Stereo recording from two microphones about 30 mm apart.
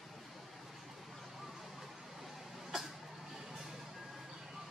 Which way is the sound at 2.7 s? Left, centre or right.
Centre.